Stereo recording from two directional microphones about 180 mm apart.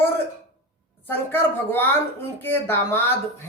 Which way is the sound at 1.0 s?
10° left (ahead or behind).